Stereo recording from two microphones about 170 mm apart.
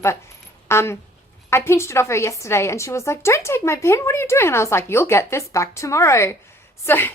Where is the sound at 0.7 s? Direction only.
15° left (ahead or behind).